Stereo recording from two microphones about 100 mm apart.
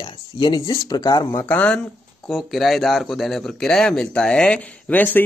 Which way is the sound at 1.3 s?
15° left (ahead or behind).